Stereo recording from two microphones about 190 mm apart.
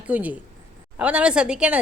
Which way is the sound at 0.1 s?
10° right (ahead or behind).